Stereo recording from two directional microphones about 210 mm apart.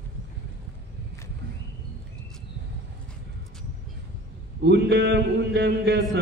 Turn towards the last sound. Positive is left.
turn(degrees=-55)  # may be behind; listen again after turning